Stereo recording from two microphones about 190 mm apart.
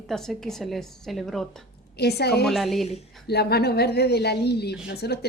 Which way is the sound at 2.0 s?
60° left (ahead or behind).